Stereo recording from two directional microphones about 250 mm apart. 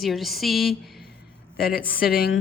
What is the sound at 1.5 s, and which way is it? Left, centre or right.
Speech, left.